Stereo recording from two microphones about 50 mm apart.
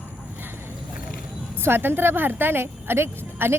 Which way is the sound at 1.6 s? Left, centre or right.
Right.